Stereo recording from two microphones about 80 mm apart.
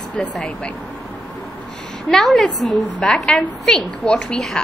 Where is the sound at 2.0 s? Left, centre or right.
Centre.